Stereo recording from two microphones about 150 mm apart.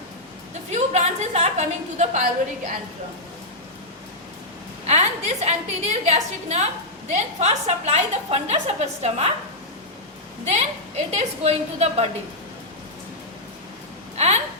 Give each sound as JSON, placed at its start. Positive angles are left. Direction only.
{"t": 0.7, "sound": "a woman's voice", "side_deg": -50}
{"t": 4.9, "sound": "a woman's voice", "side_deg": -45}
{"t": 10.4, "sound": "a woman's voice", "side_deg": -45}
{"t": 14.2, "sound": "a sound", "side_deg": -45}